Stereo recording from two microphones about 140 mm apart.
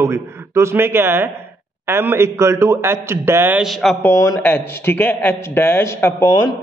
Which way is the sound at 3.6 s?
Centre (ahead or behind).